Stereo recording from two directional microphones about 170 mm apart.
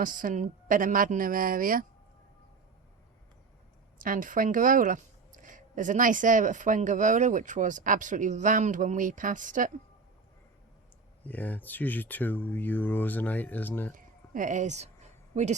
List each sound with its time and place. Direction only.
0.0 s speech: 50° right (ahead or behind)
4.0 s speech: 55° right (ahead or behind)
11.3 s speech: 10° left (ahead or behind)
13.9 s speech: 50° right (ahead or behind)